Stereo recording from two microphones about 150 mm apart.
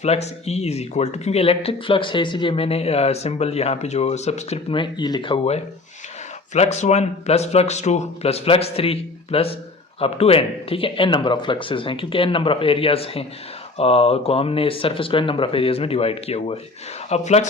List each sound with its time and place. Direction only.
0.0 s speech: 45° left (ahead or behind)